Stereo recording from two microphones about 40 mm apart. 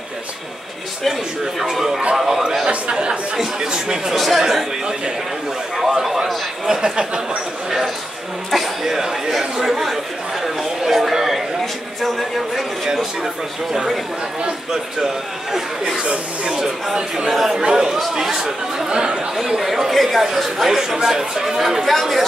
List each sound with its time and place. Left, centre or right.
1.4 s speech: centre
2.6 s speech: right
4.1 s speech: centre
6.2 s a sound: centre
8.5 s speech: centre
12.8 s speech: centre
14.4 s speech: centre
16.5 s speech: centre
17.6 s speech: centre
18.9 s speech: right
19.9 s speech: centre
21.8 s speech: centre